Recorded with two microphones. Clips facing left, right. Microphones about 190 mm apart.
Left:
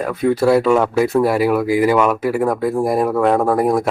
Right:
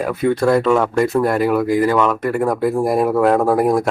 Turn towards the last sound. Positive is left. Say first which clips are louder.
# right 1 dB
turn(degrees=0)  # may be behind; listen again after turning